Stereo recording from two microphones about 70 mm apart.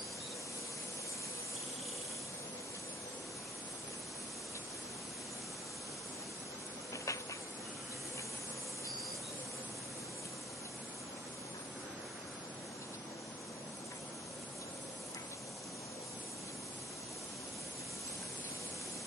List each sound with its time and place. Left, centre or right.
6.9 s hiss: left